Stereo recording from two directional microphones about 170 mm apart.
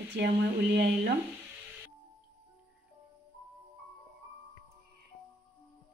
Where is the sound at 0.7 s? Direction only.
70° right (ahead or behind).